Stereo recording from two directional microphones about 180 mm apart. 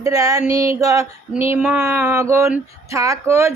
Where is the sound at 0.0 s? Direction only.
20° right (ahead or behind).